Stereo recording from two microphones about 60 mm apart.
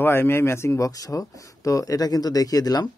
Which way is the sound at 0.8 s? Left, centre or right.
Left.